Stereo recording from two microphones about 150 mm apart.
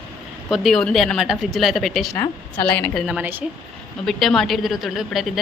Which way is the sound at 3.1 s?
10° right (ahead or behind).